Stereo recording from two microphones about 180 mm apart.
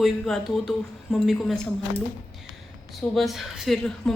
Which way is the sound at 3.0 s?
Centre (ahead or behind).